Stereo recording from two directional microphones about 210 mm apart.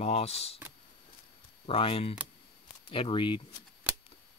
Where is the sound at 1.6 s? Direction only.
25° left (ahead or behind).